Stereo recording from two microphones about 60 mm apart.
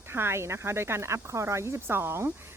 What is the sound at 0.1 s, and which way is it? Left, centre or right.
Speech, right.